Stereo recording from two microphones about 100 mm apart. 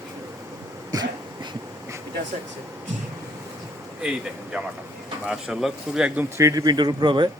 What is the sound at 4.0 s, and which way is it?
Speech, 5° right (ahead or behind).